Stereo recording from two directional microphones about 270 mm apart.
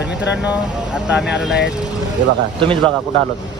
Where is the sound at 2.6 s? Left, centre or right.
Centre.